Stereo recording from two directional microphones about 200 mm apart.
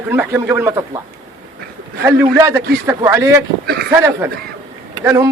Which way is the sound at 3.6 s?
50° right (ahead or behind).